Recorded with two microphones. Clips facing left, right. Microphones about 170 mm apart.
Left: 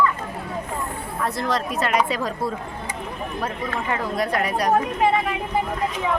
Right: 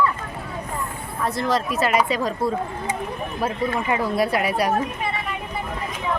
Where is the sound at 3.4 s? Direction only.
10° right (ahead or behind).